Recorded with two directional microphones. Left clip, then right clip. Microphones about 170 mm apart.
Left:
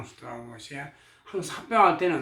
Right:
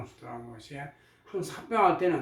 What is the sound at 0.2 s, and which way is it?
Speech, 20° left (ahead or behind).